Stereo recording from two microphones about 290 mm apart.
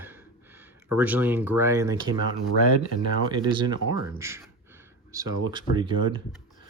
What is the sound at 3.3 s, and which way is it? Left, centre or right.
Speech, centre.